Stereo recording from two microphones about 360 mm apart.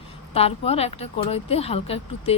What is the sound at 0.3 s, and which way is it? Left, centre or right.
Speech, centre.